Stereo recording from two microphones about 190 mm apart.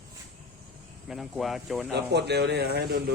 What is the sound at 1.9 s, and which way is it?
Speech, 60° right (ahead or behind).